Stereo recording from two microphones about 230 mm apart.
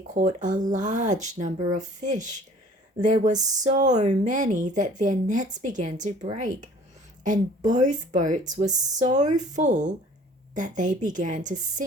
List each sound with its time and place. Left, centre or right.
0.1 s speech: right